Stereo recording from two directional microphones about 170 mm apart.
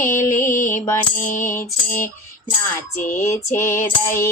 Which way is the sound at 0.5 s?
50° left (ahead or behind).